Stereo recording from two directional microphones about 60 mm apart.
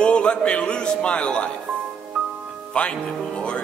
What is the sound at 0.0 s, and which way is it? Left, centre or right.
A man's voice, centre.